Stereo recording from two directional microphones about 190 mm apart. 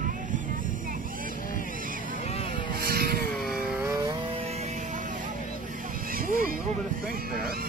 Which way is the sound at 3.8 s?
15° right (ahead or behind).